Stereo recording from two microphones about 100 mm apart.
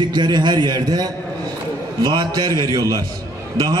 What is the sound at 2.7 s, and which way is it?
Speech, 35° right (ahead or behind).